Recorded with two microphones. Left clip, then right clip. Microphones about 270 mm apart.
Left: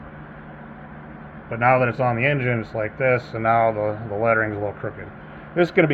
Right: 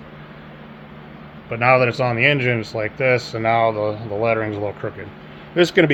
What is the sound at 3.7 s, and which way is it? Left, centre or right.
Speech, right.